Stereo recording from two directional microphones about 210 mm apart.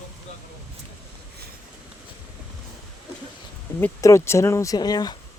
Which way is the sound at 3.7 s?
10° left (ahead or behind).